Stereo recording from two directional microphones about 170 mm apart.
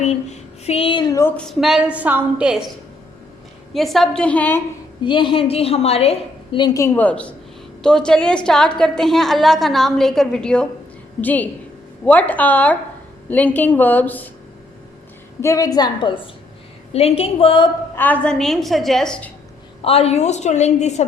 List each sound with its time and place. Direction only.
0.0 s speech: 40° left (ahead or behind)
1.2 s a woman's voice: 5° left (ahead or behind)
3.8 s a woman's voice: centre (ahead or behind)
5.0 s a woman's voice: 30° left (ahead or behind)
6.7 s a woman's voice: 15° left (ahead or behind)
15.4 s a woman's voice: 20° left (ahead or behind)
17.9 s a woman's voice: 10° left (ahead or behind)
19.8 s a woman's voice: 35° left (ahead or behind)